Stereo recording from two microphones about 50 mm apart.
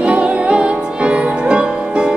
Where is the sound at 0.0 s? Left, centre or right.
Right.